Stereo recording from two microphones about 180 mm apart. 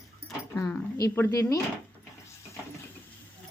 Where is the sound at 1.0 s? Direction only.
15° left (ahead or behind).